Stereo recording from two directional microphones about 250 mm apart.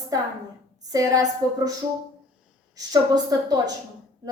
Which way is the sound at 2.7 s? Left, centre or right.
Centre.